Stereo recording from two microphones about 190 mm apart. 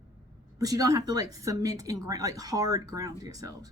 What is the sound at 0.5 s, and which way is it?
Speech, 20° right (ahead or behind).